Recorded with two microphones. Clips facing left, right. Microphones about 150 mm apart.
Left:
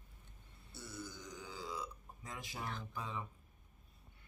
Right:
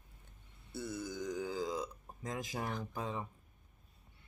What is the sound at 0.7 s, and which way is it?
Burping, 55° right (ahead or behind).